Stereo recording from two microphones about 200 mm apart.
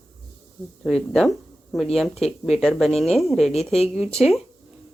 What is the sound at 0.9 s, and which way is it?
Speech, centre (ahead or behind).